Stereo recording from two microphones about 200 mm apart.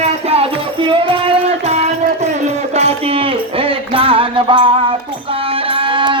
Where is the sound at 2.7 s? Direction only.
30° right (ahead or behind).